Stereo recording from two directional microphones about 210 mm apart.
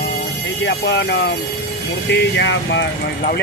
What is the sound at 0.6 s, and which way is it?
Speech, 55° left (ahead or behind).